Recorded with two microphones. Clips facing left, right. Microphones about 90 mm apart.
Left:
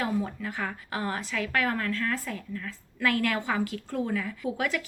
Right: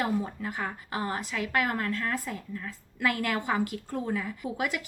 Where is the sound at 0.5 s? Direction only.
30° right (ahead or behind).